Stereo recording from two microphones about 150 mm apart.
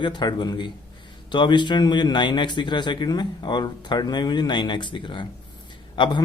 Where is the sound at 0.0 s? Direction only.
30° left (ahead or behind).